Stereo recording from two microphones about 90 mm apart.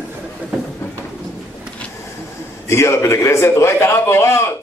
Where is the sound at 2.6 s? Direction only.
30° left (ahead or behind).